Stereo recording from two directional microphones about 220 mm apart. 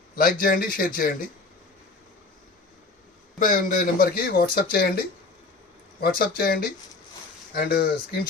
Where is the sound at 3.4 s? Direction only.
35° left (ahead or behind).